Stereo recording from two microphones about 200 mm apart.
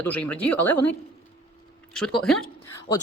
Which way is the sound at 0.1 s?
10° left (ahead or behind).